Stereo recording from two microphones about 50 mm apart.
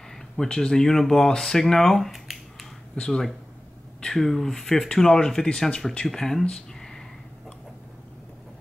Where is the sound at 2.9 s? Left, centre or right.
Centre.